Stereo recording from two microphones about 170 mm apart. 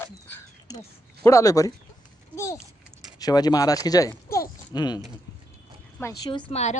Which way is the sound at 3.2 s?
25° left (ahead or behind).